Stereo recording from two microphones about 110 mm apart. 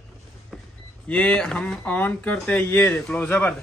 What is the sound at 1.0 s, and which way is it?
Speech, 10° left (ahead or behind).